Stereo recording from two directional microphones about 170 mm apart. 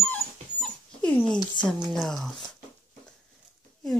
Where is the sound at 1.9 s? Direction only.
Centre (ahead or behind).